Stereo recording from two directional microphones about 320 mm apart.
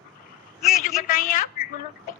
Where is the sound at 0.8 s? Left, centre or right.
Left.